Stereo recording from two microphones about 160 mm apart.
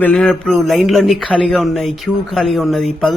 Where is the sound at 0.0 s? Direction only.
5° left (ahead or behind).